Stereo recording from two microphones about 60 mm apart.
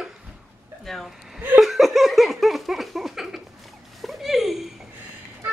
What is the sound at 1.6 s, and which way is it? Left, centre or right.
Laughter, centre.